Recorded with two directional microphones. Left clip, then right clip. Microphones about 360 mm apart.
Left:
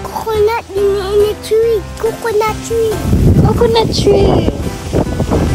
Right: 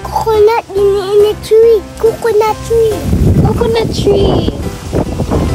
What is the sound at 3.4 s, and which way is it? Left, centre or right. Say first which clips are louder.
Speech: left 2 dB; centre.